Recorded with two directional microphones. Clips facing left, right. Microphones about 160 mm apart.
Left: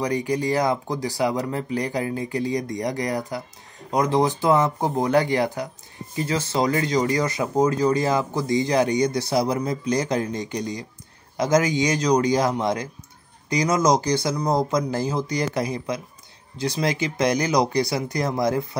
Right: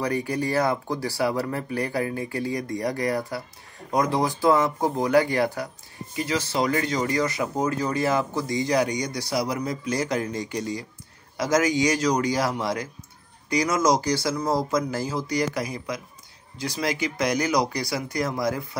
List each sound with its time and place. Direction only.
0.0 s speech: 15° left (ahead or behind)